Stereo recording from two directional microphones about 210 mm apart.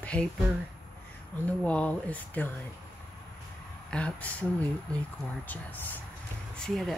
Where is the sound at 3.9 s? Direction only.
5° left (ahead or behind).